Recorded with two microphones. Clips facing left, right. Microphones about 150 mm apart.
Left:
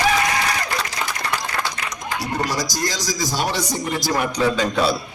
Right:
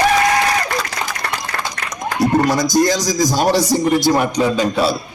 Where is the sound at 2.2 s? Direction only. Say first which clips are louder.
Right 10 dB; 55° right (ahead or behind).